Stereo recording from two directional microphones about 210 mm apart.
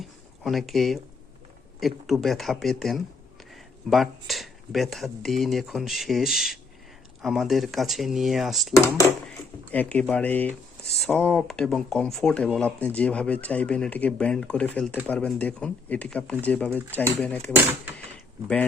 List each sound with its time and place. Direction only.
0.0 s a sound: centre (ahead or behind)
1.8 s speech: centre (ahead or behind)
9.7 s speech: 5° left (ahead or behind)